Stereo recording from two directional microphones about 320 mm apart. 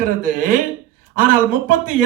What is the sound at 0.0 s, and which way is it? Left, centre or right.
Speech, right.